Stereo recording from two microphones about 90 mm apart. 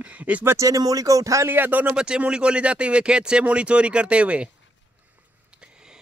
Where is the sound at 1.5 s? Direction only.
20° right (ahead or behind).